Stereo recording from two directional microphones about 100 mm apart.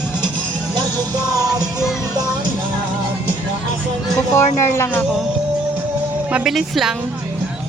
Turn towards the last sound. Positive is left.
turn(degrees=0)  # may be behind; listen again after turning